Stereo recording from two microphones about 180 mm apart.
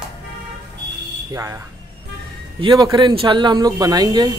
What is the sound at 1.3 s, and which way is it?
Speech, 15° right (ahead or behind).